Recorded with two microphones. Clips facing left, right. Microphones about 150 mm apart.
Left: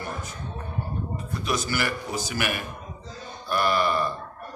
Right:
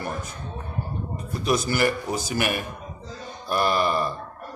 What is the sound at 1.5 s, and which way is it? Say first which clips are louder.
Speech: right 5 dB; 35° right (ahead or behind).